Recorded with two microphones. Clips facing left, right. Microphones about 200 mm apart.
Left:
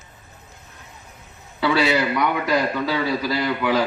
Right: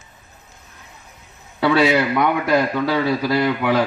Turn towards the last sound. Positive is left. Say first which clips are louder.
# right 3 dB
turn(degrees=-55)  # may be behind; listen again after turning